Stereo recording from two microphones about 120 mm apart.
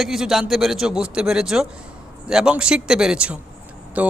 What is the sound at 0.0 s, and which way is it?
A man's voice, centre (ahead or behind).